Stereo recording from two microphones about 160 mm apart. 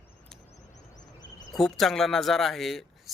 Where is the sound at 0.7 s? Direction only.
50° left (ahead or behind).